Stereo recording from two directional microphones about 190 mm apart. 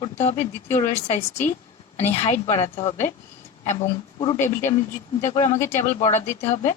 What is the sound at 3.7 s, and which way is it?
Speech, 25° left (ahead or behind).